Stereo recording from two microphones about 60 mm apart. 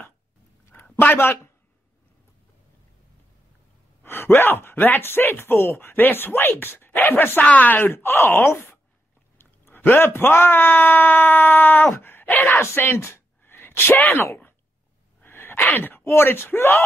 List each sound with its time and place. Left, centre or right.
0.8 s a sound: left
1.1 s speech: left
4.0 s speech: left
7.8 s speech: left
9.4 s speech: left
12.5 s a sound: left
15.2 s sneeze: left
16.0 s speech: left